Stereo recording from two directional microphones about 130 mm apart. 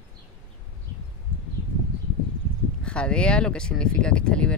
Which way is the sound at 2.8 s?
5° left (ahead or behind).